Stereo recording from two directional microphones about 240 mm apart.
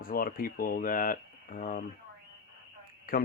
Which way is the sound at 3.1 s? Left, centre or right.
Left.